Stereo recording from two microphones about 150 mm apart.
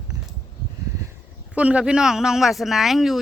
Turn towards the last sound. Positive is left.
turn(degrees=0)  # may be behind; listen again after turning